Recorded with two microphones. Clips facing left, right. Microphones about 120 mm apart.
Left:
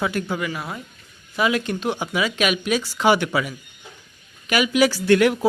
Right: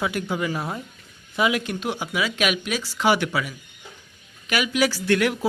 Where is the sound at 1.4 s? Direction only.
15° right (ahead or behind).